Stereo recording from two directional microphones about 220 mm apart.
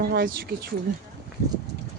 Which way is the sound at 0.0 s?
45° right (ahead or behind).